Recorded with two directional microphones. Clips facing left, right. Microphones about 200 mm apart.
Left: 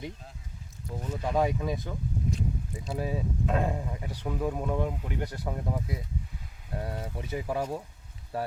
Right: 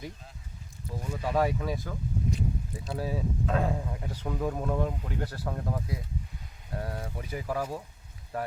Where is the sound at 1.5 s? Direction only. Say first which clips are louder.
Left 1 dB; 20° left (ahead or behind).